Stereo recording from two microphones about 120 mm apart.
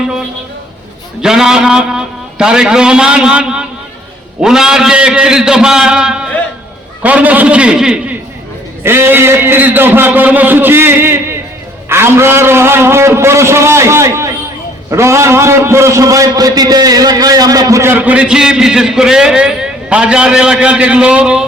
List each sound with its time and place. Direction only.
1.2 s a man's voice: 5° right (ahead or behind)
8.8 s a man's voice: 20° right (ahead or behind)